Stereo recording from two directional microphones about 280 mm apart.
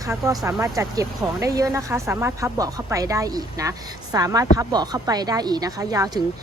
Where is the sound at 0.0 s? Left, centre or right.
Centre.